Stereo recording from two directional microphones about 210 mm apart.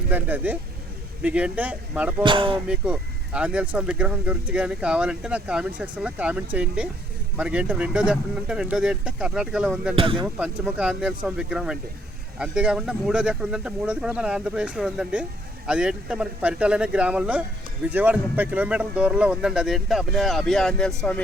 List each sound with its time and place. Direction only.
0.1 s speech: 10° right (ahead or behind)
2.2 s speech: 25° right (ahead or behind)
2.6 s speech: 5° right (ahead or behind)
9.9 s speech: 25° right (ahead or behind)
10.2 s speech: 5° right (ahead or behind)